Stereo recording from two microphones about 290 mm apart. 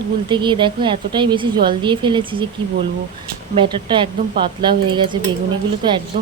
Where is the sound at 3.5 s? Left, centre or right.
Centre.